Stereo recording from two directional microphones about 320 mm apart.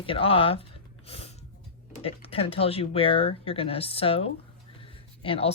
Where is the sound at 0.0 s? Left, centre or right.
Centre.